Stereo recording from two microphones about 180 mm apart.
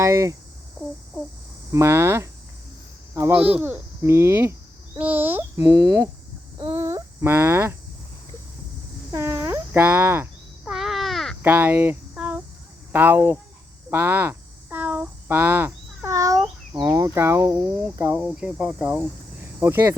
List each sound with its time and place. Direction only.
0.0 s speech: 15° right (ahead or behind)
1.7 s speech: 15° right (ahead or behind)
9.1 s speech: 15° right (ahead or behind)
10.7 s crow: centre (ahead or behind)
11.4 s cricket: 10° right (ahead or behind)
12.9 s speech: 10° right (ahead or behind)
19.4 s cricket: 15° right (ahead or behind)